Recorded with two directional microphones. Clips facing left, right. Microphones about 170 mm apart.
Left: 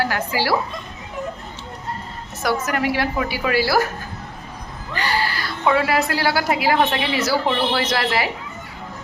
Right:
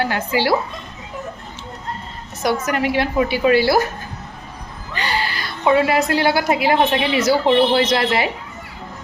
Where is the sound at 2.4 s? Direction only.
20° right (ahead or behind).